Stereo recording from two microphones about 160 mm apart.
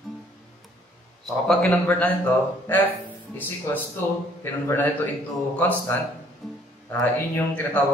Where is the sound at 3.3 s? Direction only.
15° left (ahead or behind).